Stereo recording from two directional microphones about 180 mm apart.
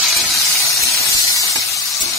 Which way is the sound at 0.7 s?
15° left (ahead or behind).